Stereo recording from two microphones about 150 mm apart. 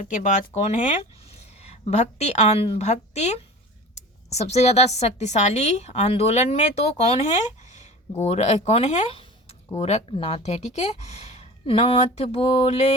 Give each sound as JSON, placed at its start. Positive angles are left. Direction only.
{"t": 0.0, "sound": "a woman's voice", "side_deg": 55}